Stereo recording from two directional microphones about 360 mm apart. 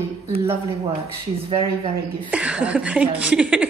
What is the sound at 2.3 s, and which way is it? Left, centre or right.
A woman's voice, centre.